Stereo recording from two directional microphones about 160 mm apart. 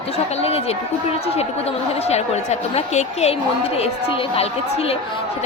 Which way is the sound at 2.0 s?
40° left (ahead or behind).